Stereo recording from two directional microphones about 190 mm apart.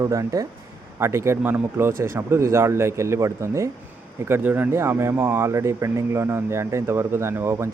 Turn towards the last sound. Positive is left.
turn(degrees=-15)  # may be behind; listen again after turning